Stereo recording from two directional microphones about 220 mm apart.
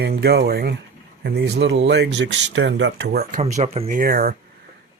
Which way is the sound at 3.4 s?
30° right (ahead or behind).